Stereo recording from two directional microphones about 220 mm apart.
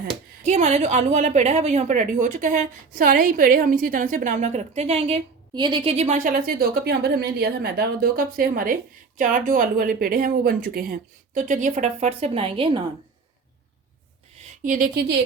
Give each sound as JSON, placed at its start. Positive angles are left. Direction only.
{"t": 0.4, "sound": "a woman's voice", "side_deg": -30}
{"t": 14.6, "sound": "a woman's voice", "side_deg": -40}